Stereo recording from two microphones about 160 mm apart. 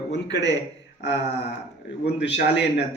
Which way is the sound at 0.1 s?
90° left.